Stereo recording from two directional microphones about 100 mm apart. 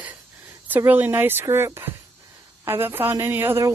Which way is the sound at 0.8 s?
20° right (ahead or behind).